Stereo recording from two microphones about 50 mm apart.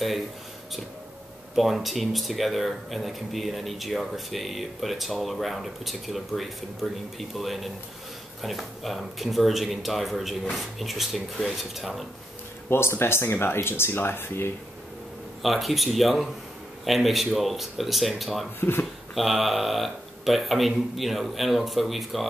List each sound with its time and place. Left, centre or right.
1.5 s speech: centre
12.6 s speech: left
15.4 s speech: centre
18.6 s speech: left
19.1 s speech: centre